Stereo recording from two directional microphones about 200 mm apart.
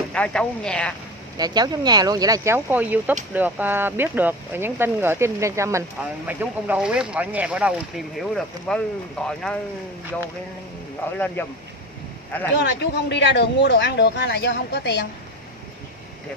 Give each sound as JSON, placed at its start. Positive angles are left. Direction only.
{"t": 0.1, "sound": "speech", "side_deg": 5}
{"t": 1.4, "sound": "speech", "side_deg": -20}
{"t": 12.5, "sound": "speech", "side_deg": 60}